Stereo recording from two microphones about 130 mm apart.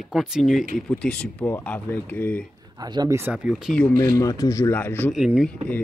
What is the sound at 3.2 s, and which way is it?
Speech, 10° right (ahead or behind).